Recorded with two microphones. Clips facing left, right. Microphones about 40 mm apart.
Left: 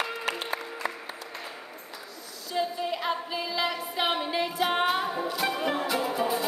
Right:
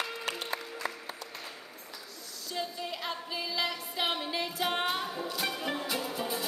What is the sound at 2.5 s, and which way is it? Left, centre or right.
Music, centre.